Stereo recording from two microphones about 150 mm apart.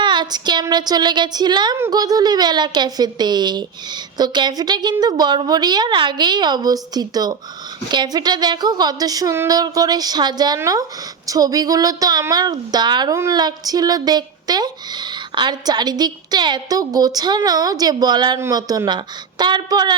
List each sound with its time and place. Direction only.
0.0 s speech: 30° right (ahead or behind)